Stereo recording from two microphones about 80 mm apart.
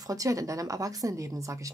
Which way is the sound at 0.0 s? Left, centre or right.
Right.